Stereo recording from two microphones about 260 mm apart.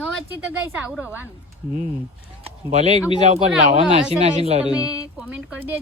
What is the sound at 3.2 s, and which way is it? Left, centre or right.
Speech, right.